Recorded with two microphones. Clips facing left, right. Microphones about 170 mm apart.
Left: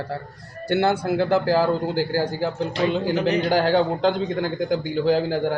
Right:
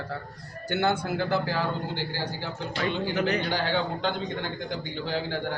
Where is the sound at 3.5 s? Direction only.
45° left (ahead or behind).